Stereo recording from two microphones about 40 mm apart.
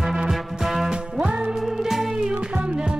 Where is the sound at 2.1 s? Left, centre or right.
Right.